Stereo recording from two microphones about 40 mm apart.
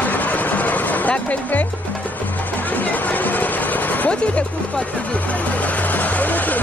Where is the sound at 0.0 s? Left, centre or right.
Left.